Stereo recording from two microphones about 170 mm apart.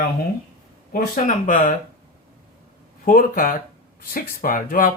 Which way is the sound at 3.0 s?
55° left (ahead or behind).